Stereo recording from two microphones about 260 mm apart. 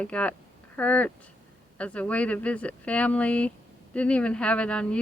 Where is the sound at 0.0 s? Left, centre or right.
Centre.